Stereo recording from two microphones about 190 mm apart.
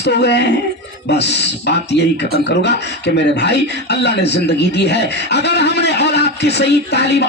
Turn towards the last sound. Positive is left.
turn(degrees=60)  # may be behind; listen again after turning